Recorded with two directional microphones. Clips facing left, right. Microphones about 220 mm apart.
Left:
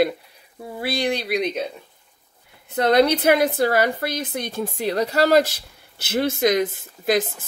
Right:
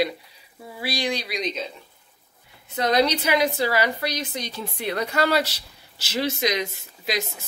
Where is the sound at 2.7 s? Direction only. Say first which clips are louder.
Left 4 dB; 60° left (ahead or behind).